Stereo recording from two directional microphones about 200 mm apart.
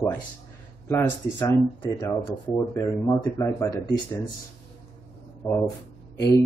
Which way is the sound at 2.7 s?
15° left (ahead or behind).